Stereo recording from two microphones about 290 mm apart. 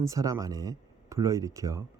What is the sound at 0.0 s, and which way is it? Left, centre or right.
Speech, centre.